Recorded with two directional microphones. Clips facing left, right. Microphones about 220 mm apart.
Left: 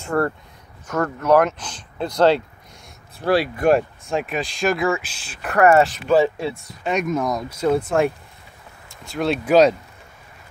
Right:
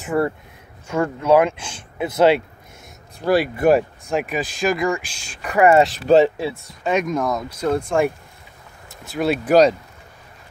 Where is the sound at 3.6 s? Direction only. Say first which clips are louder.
Right 1 dB; 5° right (ahead or behind).